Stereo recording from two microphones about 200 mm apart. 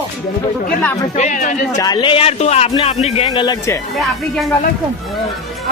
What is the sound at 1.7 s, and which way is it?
Speech, 20° left (ahead or behind).